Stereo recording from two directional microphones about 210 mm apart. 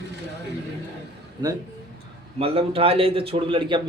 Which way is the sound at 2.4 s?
25° right (ahead or behind).